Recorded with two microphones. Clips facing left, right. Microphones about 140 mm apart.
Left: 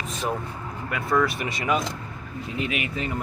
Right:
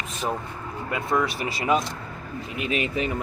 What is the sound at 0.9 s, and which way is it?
Speech, 25° right (ahead or behind).